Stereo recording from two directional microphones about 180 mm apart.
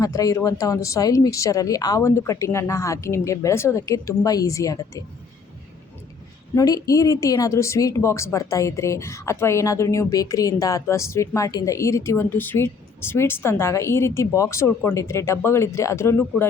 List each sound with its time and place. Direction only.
0.0 s a woman's voice: 20° left (ahead or behind)
6.6 s a woman's voice: 20° left (ahead or behind)